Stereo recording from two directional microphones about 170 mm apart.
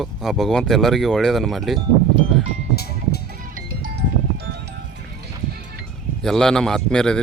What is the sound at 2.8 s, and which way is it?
Music, 65° left (ahead or behind).